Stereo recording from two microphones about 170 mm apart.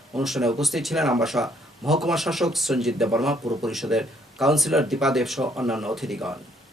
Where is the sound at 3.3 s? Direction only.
20° right (ahead or behind).